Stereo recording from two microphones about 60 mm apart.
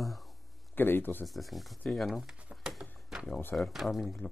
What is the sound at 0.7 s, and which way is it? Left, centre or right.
Speech, left.